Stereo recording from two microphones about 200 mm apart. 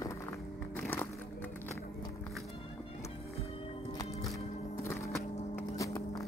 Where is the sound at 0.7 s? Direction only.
10° left (ahead or behind).